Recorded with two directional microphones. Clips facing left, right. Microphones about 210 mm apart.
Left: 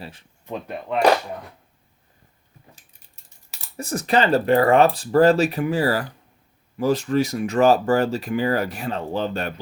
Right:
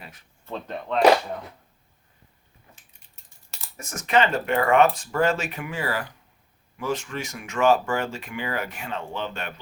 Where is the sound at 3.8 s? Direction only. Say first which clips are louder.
Left 2 dB; 35° left (ahead or behind).